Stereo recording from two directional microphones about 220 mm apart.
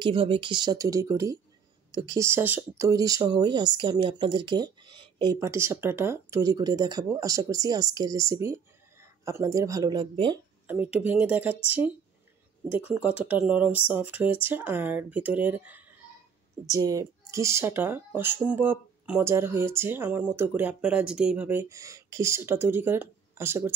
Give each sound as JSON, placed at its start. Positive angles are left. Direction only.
{"t": 0.0, "sound": "speech", "side_deg": -25}
{"t": 10.7, "sound": "speech", "side_deg": -5}